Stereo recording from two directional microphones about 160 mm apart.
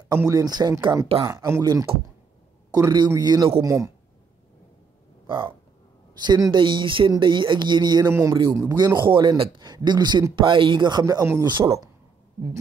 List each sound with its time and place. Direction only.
0.3 s a man's voice: 25° right (ahead or behind)
5.2 s a sound: 30° right (ahead or behind)
6.1 s a man's voice: 25° right (ahead or behind)